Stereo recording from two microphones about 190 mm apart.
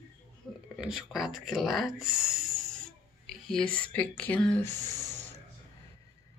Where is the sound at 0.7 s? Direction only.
Centre (ahead or behind).